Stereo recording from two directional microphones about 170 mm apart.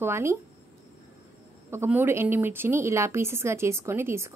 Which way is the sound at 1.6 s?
15° right (ahead or behind).